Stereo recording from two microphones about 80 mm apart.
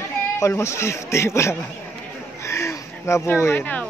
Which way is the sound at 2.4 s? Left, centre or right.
Left.